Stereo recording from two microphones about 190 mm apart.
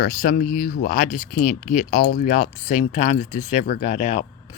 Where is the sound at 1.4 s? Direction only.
45° left (ahead or behind).